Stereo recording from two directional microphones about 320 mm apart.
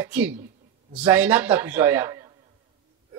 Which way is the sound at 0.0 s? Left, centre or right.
Centre.